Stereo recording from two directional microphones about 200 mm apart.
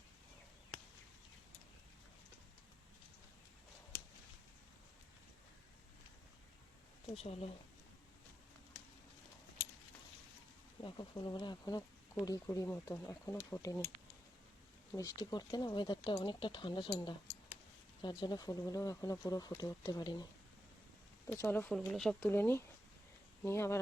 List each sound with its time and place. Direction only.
7.2 s speech: 30° left (ahead or behind)
10.8 s speech: 25° left (ahead or behind)
14.9 s speech: 15° left (ahead or behind)
21.2 s speech: 10° left (ahead or behind)